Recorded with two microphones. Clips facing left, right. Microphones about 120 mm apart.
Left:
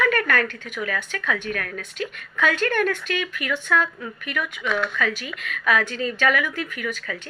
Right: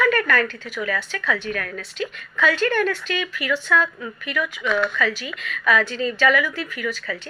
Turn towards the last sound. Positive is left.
turn(degrees=50)  # may be behind; listen again after turning